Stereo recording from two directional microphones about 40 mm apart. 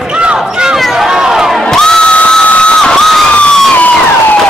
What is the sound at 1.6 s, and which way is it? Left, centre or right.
Crowd, centre.